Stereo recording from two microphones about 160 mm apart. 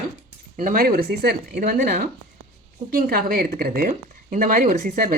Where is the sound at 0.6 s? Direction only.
60° right (ahead or behind).